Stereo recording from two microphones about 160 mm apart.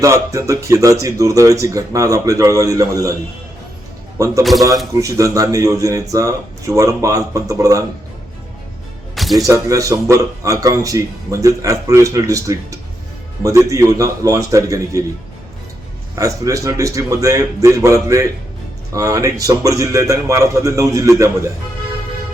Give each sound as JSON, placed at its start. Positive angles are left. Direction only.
{"t": 0.0, "sound": "speech", "side_deg": -20}
{"t": 4.2, "sound": "speech", "side_deg": -20}
{"t": 9.1, "sound": "music", "side_deg": 0}
{"t": 9.5, "sound": "speech", "side_deg": -20}
{"t": 16.1, "sound": "speech", "side_deg": -20}